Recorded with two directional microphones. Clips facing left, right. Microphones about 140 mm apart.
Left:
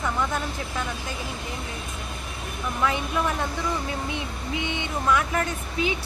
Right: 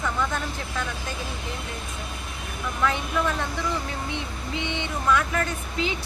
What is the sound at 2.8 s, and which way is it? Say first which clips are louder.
Speech: even; 15° left (ahead or behind).